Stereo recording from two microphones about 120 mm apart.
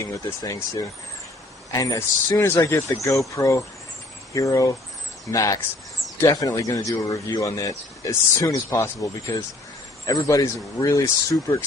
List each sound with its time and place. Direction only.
0.4 s speech: 30° left (ahead or behind)